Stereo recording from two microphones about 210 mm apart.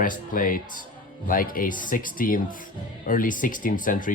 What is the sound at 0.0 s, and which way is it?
Speech, 40° left (ahead or behind).